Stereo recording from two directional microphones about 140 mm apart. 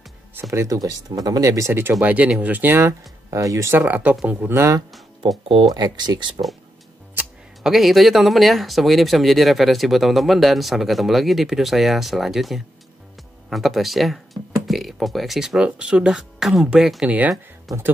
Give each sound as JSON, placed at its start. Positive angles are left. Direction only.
{"t": 0.3, "sound": "speech", "side_deg": -15}
{"t": 4.6, "sound": "speech", "side_deg": -25}
{"t": 7.6, "sound": "speech", "side_deg": 0}